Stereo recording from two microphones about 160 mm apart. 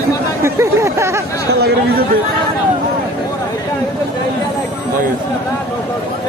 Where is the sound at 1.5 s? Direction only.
90° right.